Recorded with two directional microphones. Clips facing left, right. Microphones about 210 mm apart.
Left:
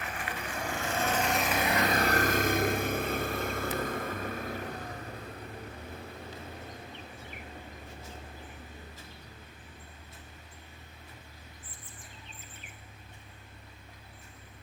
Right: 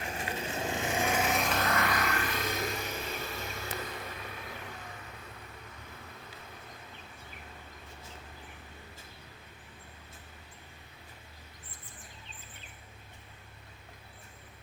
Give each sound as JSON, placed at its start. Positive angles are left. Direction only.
{"t": 0.0, "sound": "vehicle", "side_deg": -25}